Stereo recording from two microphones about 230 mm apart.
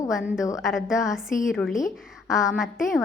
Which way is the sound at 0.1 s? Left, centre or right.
Centre.